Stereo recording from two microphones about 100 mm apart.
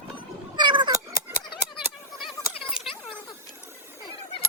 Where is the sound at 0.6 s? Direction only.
50° right (ahead or behind).